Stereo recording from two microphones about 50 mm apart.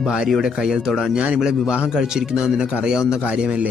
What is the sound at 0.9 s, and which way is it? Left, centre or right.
Speech, centre.